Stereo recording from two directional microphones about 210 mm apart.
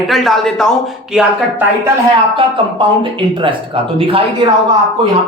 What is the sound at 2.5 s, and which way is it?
Speech, 25° right (ahead or behind).